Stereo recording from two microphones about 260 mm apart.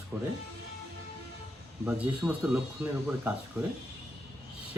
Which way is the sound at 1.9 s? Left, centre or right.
Centre.